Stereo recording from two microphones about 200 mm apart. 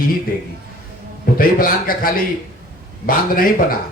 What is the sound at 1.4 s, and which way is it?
Speech, 45° left (ahead or behind).